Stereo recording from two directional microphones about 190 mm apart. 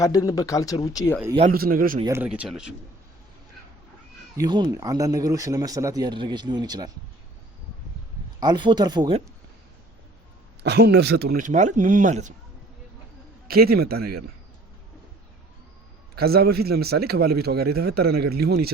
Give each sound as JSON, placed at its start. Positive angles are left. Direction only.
{"t": 0.0, "sound": "speech", "side_deg": 20}
{"t": 1.5, "sound": "speech", "side_deg": -50}
{"t": 2.0, "sound": "speech", "side_deg": -10}
{"t": 4.4, "sound": "speech", "side_deg": -20}
{"t": 8.4, "sound": "speech", "side_deg": -25}
{"t": 10.6, "sound": "speech", "side_deg": -60}
{"t": 13.5, "sound": "speech", "side_deg": -55}
{"t": 16.1, "sound": "a man's voice", "side_deg": -55}